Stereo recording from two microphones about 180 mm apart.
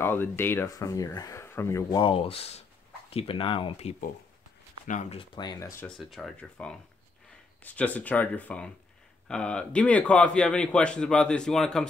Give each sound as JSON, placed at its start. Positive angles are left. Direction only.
{"t": 0.0, "sound": "speech", "side_deg": 10}
{"t": 5.2, "sound": "speech", "side_deg": 25}
{"t": 5.9, "sound": "a man's voice", "side_deg": 0}